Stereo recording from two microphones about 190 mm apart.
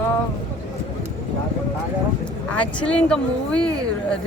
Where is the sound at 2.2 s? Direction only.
5° left (ahead or behind).